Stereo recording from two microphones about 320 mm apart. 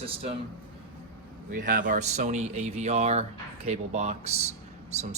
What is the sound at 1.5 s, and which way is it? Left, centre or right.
Speech, right.